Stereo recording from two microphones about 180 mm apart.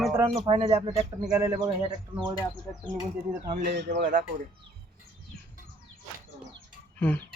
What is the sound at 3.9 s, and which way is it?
Speech, 45° right (ahead or behind).